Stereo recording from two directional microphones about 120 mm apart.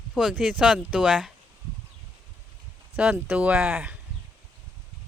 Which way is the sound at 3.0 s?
10° right (ahead or behind).